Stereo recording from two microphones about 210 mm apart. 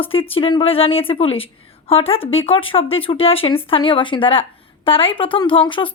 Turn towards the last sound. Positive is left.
turn(degrees=25)  # may be behind; listen again after turning